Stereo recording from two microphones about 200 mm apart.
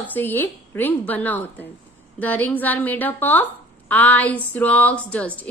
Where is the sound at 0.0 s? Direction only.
10° left (ahead or behind).